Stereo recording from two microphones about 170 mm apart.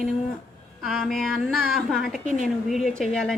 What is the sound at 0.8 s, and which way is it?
A woman's voice, centre (ahead or behind).